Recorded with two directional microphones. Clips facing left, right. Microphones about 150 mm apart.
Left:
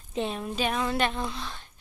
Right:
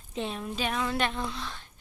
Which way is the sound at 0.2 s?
15° left (ahead or behind).